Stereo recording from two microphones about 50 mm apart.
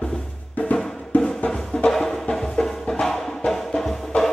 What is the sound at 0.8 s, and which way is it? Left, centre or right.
Music, centre.